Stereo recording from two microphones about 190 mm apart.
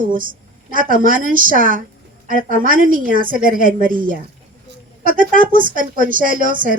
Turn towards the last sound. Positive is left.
turn(degrees=-45)  # may be behind; listen again after turning